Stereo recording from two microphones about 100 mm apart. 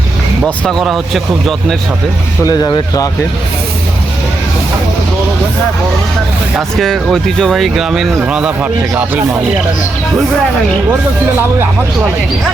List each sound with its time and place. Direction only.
0.6 s speech: centre (ahead or behind)
2.4 s speech: 40° left (ahead or behind)
6.6 s speech: centre (ahead or behind); by 9.2 s 15° right (ahead or behind)